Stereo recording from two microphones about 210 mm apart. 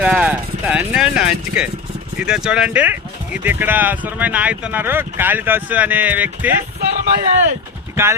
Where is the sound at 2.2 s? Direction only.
5° right (ahead or behind).